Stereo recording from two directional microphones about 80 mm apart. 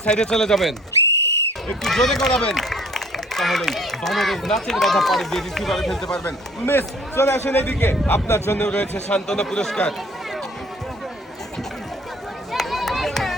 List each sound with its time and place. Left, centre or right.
0.0 s speech: centre
6.2 s a man's voice: left
8.5 s speech: centre
12.5 s run: centre